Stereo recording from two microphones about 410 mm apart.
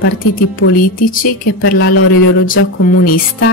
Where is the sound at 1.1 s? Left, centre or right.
Left.